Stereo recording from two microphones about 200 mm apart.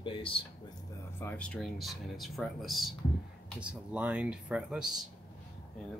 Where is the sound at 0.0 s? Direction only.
25° left (ahead or behind).